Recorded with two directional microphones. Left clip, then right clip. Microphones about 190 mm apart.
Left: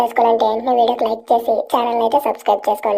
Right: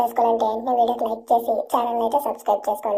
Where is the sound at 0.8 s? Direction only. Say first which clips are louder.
Left 5 dB; 25° left (ahead or behind).